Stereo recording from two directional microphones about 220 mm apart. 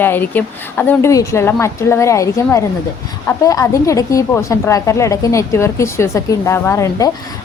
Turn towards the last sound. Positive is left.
turn(degrees=15)  # may be behind; listen again after turning